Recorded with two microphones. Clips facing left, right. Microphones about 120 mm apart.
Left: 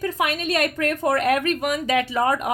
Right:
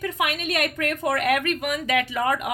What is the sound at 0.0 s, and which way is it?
Speech, 35° left (ahead or behind).